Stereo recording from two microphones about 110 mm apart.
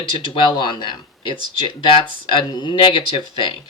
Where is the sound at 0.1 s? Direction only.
45° left (ahead or behind).